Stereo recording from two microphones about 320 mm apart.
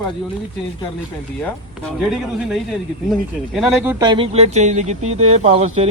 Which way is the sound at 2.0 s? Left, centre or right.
Centre.